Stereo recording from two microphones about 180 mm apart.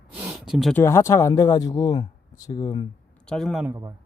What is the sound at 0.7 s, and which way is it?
Speech, 15° left (ahead or behind).